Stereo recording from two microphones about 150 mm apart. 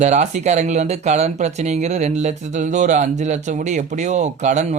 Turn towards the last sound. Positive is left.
turn(degrees=-50)  # may be behind; listen again after turning